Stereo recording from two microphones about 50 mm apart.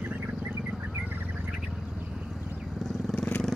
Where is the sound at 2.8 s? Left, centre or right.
Centre.